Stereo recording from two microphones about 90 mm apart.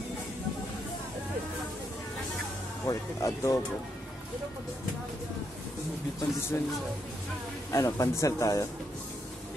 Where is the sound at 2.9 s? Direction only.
35° left (ahead or behind).